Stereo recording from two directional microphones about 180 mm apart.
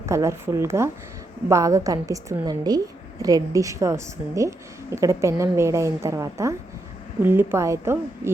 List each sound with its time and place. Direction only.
0.0 s a woman's voice: 15° right (ahead or behind)